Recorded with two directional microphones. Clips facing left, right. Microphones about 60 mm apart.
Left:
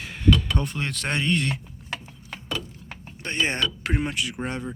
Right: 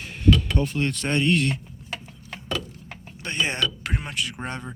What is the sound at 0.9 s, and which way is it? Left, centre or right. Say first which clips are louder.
Speech: right 2 dB; left.